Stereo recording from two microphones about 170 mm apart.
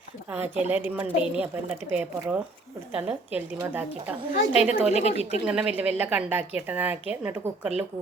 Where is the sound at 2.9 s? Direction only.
10° right (ahead or behind).